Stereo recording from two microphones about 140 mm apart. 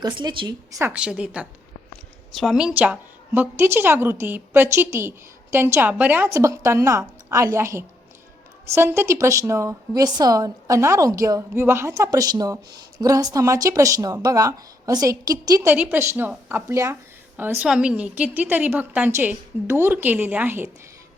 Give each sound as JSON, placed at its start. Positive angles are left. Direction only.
{"t": 0.0, "sound": "speech", "side_deg": -35}
{"t": 0.9, "sound": "a woman's voice", "side_deg": -5}
{"t": 15.7, "sound": "a woman's voice", "side_deg": -10}